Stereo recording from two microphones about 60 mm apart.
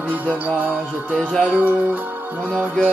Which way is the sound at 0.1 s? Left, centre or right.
Right.